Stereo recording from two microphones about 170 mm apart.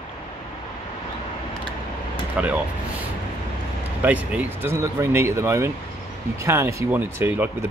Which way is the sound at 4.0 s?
10° right (ahead or behind).